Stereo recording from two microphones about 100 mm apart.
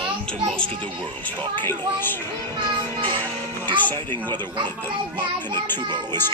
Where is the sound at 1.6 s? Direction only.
20° left (ahead or behind).